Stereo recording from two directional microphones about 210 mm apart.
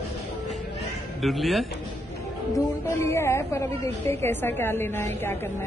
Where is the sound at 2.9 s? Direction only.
10° left (ahead or behind).